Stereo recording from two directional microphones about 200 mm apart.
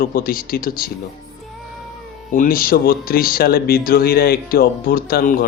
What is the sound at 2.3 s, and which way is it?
Speech, 45° left (ahead or behind).